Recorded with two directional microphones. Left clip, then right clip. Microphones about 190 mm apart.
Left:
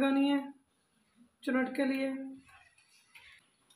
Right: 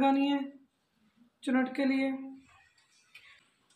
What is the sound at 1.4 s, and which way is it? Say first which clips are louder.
Speech: right 2 dB; 20° right (ahead or behind).